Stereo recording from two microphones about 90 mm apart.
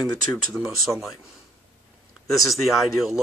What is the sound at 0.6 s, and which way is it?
Speech, centre (ahead or behind).